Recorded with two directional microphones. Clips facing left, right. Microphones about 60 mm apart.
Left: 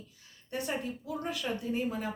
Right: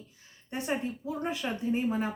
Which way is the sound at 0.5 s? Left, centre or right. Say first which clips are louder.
Right 2 dB; right.